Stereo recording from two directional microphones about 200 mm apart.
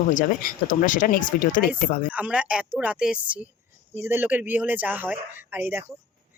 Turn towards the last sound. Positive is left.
turn(degrees=-10)  # may be behind; listen again after turning